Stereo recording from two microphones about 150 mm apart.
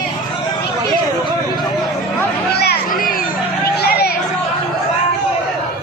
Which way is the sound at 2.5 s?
80° left.